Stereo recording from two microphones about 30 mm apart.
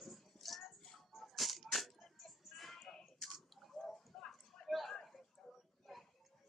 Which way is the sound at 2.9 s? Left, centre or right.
Centre.